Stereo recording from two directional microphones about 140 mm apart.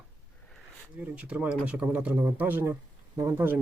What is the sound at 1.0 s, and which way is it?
Speech, 10° right (ahead or behind).